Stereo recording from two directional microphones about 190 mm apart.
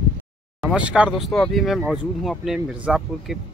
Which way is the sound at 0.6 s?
5° right (ahead or behind).